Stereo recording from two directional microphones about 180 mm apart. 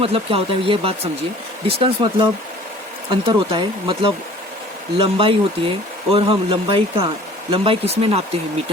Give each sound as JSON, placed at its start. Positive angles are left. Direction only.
{"t": 0.0, "sound": "speech", "side_deg": -30}
{"t": 3.1, "sound": "speech", "side_deg": -30}